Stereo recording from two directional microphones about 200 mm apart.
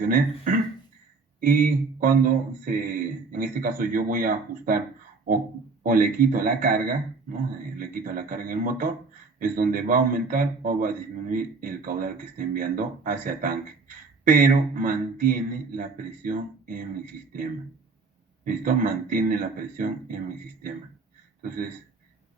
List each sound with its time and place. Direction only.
0.0 s a man's voice: 40° right (ahead or behind)
5.8 s a man's voice: 45° right (ahead or behind)
18.4 s a man's voice: 45° right (ahead or behind)